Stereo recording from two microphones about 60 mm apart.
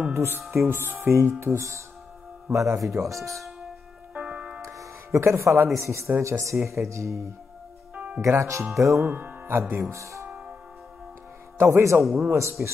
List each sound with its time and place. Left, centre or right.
0.1 s speech: right
0.7 s speech: right
4.1 s tick-tock: right
4.6 s music: right
5.8 s speech: right
7.9 s music: right
8.3 s speech: right
9.5 s speech: right
11.5 s speech: right
12.0 s a man's voice: centre
12.3 s speech: right